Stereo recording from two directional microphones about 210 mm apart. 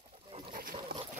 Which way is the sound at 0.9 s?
45° right (ahead or behind).